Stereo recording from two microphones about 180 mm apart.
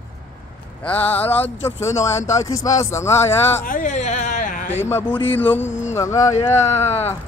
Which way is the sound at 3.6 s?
50° left (ahead or behind).